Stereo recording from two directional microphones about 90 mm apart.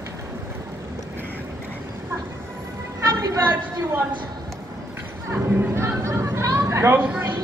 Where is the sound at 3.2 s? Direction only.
50° right (ahead or behind).